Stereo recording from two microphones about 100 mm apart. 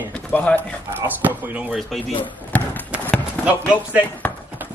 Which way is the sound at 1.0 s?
15° right (ahead or behind).